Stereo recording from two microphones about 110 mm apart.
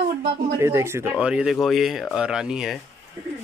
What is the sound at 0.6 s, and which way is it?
Speech, 25° right (ahead or behind).